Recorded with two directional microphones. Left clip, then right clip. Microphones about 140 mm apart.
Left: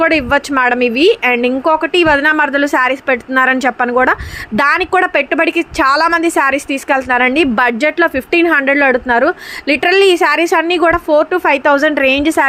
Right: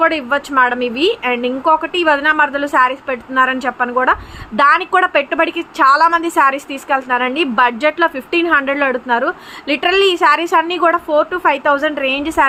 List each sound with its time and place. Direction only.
0.0 s speech: 50° left (ahead or behind)